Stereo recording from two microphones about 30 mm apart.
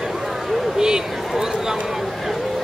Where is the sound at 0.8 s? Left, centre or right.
Right.